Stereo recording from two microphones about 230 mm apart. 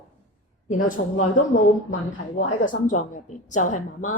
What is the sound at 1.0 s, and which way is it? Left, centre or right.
Speech, left.